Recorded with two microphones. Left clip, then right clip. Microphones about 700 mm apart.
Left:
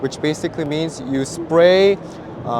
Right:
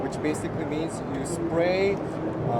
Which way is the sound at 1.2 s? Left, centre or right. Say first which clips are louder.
Left 12 dB; left.